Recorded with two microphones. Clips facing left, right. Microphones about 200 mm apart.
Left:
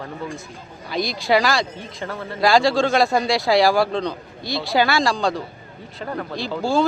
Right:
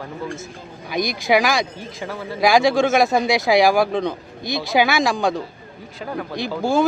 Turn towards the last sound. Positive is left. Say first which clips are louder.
# right 1 dB
turn(degrees=-20)  # may be behind; listen again after turning